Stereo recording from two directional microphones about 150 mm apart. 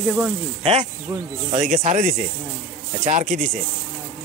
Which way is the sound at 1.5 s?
45° right (ahead or behind).